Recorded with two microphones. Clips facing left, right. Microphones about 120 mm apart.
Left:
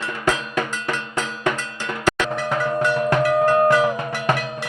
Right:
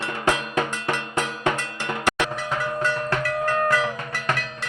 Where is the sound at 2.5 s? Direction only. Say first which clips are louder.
Left 8 dB; 20° left (ahead or behind).